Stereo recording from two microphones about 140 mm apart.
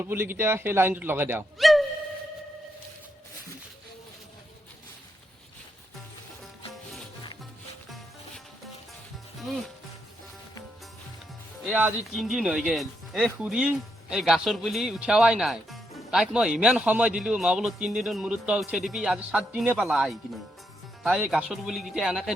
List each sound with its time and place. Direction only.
0.0 s a man's voice: 15° right (ahead or behind)
1.5 s speech: centre (ahead or behind)
11.7 s speech: 5° right (ahead or behind)